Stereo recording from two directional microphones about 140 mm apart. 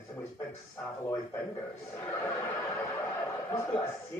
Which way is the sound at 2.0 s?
15° left (ahead or behind).